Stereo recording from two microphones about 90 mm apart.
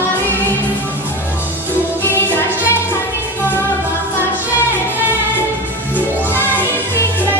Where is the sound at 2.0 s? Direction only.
25° left (ahead or behind).